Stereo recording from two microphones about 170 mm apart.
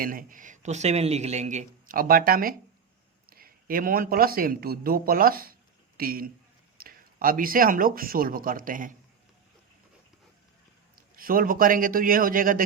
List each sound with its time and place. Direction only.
0.0 s a man's voice: 55° right (ahead or behind)
11.2 s a man's voice: 55° right (ahead or behind)